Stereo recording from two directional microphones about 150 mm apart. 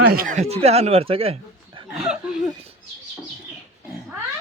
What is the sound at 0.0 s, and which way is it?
Speech, 85° right.